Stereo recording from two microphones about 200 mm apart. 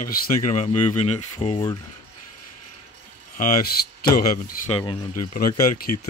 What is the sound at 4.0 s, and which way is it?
Speech, 50° left (ahead or behind).